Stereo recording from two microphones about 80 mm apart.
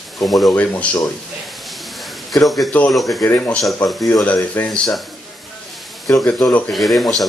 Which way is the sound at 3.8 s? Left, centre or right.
Left.